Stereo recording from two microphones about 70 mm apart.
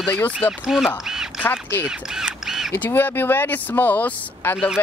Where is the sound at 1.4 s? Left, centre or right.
Left.